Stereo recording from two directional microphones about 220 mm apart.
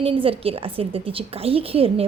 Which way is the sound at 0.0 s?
25° right (ahead or behind).